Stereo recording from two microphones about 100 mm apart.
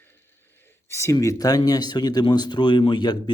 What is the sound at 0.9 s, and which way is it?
A man's voice, 30° left (ahead or behind).